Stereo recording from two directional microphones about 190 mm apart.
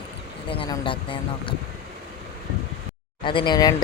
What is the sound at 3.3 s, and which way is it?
Speech, 25° left (ahead or behind).